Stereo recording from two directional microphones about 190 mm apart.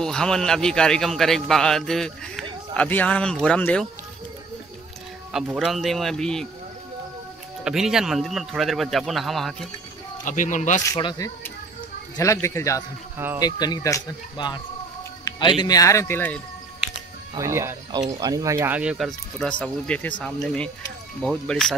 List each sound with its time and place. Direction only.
0.0 s a man's voice: 5° left (ahead or behind)
5.3 s a man's voice: centre (ahead or behind)
7.6 s a man's voice: centre (ahead or behind)
10.2 s speech: 40° left (ahead or behind)
10.9 s speech: 20° left (ahead or behind)
15.2 s a sound: 25° left (ahead or behind)
15.6 s speech: 20° left (ahead or behind)
17.3 s a man's voice: 15° right (ahead or behind); by 21.7 s 5° left (ahead or behind)